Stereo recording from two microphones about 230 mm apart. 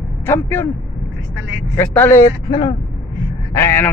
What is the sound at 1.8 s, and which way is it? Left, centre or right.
Speech, centre.